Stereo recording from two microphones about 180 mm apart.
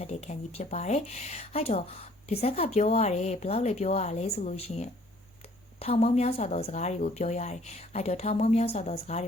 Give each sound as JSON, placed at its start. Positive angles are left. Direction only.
{"t": 0.0, "sound": "speech", "side_deg": 35}